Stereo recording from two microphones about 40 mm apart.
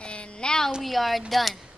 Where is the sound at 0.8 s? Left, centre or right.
Centre.